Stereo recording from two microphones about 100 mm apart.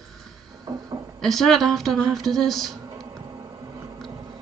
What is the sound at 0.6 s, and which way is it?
Music, 40° right (ahead or behind).